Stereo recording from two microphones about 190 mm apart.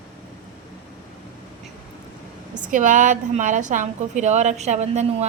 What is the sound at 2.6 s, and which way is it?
A woman's voice, 45° right (ahead or behind).